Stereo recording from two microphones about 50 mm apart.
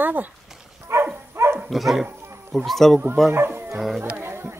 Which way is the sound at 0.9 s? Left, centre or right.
Right.